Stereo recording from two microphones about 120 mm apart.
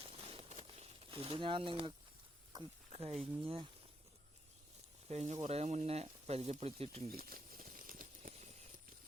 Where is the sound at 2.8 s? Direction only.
60° right (ahead or behind).